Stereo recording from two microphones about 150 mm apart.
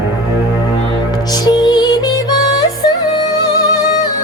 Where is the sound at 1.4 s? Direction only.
30° left (ahead or behind).